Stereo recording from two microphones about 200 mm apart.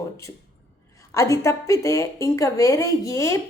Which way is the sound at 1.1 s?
15° left (ahead or behind).